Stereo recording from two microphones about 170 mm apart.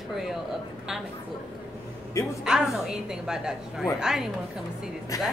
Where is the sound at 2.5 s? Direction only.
5° right (ahead or behind).